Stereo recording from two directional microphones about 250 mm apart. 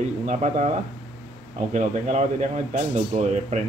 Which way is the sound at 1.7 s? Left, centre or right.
Right.